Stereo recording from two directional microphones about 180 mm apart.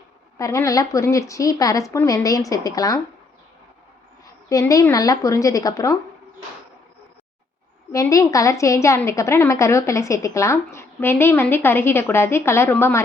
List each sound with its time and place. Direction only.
0.3 s a woman's voice: 15° left (ahead or behind)
4.4 s a woman's voice: 20° left (ahead or behind)
7.9 s a woman's voice: 15° left (ahead or behind)